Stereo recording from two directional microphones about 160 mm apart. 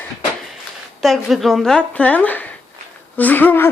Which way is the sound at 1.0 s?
Centre (ahead or behind).